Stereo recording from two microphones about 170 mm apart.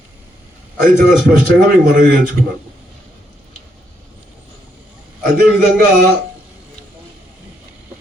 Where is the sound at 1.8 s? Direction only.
50° right (ahead or behind).